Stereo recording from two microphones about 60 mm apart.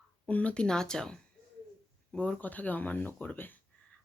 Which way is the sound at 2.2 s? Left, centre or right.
Left.